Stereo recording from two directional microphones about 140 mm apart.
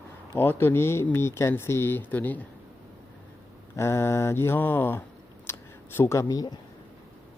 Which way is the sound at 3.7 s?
20° left (ahead or behind).